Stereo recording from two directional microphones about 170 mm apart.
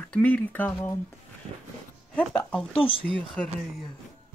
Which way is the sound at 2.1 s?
5° left (ahead or behind).